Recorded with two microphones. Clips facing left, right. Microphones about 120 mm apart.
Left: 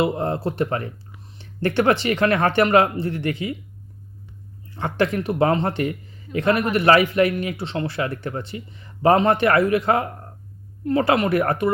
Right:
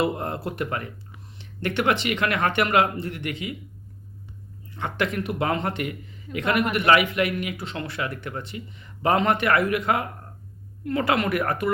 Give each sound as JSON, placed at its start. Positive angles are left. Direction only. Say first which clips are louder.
{"t": 0.0, "sound": "speech", "louder": "left 4 dB", "side_deg": 30}
{"t": 4.7, "sound": "speech", "louder": "left 5 dB", "side_deg": 30}